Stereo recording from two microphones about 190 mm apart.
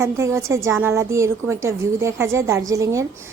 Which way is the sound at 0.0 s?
15° right (ahead or behind).